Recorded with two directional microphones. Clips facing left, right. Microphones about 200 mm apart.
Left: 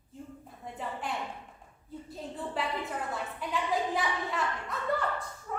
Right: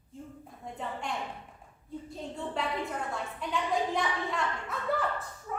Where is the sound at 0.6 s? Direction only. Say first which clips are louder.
Even; 5° left (ahead or behind).